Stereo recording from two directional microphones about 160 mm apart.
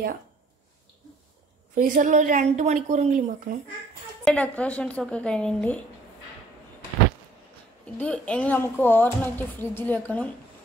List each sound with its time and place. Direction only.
1.8 s a woman's voice: 55° right (ahead or behind)
4.2 s speech: 5° left (ahead or behind)
8.0 s speech: 10° left (ahead or behind)